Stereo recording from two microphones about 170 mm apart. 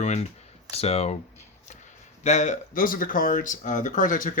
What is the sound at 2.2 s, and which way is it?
Speech, 45° left (ahead or behind).